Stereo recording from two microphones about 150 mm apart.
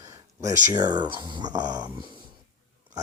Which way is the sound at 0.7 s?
30° right (ahead or behind).